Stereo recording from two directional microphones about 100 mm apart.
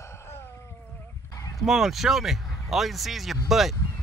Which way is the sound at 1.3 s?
35° left (ahead or behind).